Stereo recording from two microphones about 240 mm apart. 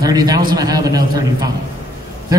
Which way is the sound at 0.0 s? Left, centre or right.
Centre.